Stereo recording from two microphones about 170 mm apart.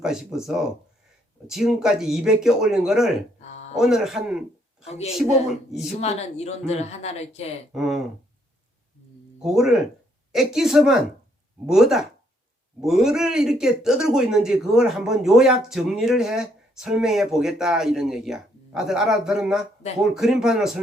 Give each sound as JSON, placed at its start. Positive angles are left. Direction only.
{"t": 0.0, "sound": "speech", "side_deg": -5}
{"t": 3.4, "sound": "a sound", "side_deg": 40}
{"t": 3.8, "sound": "speech", "side_deg": 0}
{"t": 4.9, "sound": "speech", "side_deg": 40}
{"t": 7.7, "sound": "speech", "side_deg": 0}
{"t": 9.4, "sound": "speech", "side_deg": -5}